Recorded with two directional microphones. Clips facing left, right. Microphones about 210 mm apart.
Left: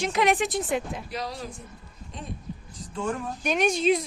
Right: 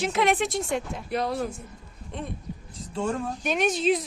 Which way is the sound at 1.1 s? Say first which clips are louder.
Right 10 dB; 55° right (ahead or behind).